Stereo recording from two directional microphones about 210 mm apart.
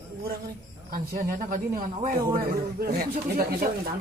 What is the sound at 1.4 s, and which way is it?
Speech, 40° right (ahead or behind).